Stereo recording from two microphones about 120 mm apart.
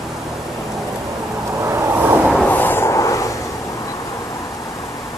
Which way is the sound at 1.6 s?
20° right (ahead or behind).